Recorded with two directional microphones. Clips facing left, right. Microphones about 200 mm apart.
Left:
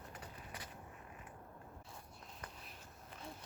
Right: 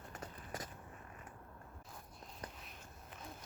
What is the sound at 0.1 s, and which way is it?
Walk, 45° right (ahead or behind).